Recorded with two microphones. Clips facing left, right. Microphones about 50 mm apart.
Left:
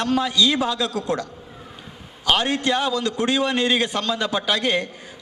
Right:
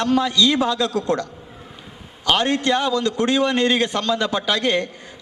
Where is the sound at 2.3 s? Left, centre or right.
Centre.